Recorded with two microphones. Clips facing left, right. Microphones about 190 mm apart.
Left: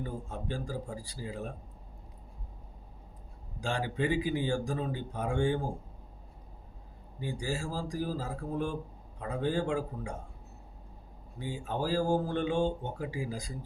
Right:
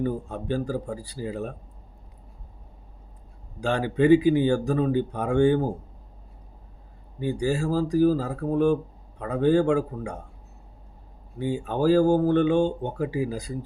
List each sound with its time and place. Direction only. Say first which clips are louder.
0.0 s speech: right 10 dB; 65° right (ahead or behind)
3.6 s speech: right 10 dB; 65° right (ahead or behind)
7.2 s speech: right 10 dB; 65° right (ahead or behind)
11.3 s speech: right 9 dB; 65° right (ahead or behind)